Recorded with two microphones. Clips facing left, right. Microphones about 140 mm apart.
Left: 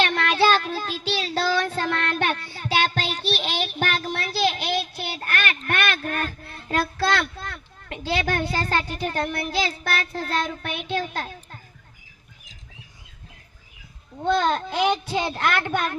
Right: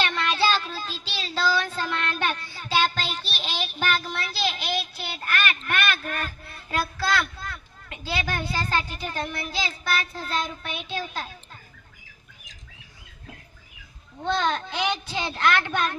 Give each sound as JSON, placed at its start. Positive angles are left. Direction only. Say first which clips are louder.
{"t": 0.0, "sound": "child singing", "louder": "left 4 dB", "side_deg": 55}
{"t": 7.9, "sound": "a child's voice", "louder": "left 5 dB", "side_deg": 55}
{"t": 14.3, "sound": "speech", "louder": "left 4 dB", "side_deg": 50}